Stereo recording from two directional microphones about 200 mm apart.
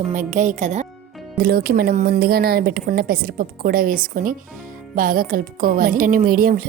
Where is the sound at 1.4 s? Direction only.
50° right (ahead or behind).